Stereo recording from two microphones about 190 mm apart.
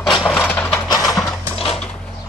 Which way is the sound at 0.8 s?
20° left (ahead or behind).